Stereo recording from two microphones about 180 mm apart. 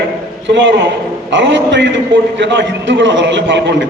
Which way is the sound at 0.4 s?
85° right.